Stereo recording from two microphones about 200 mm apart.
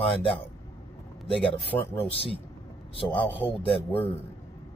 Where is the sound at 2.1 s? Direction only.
30° left (ahead or behind).